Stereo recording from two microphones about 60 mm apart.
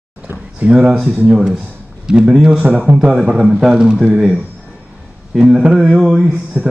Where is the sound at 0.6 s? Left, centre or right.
Centre.